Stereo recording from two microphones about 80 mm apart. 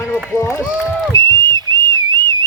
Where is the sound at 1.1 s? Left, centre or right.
Right.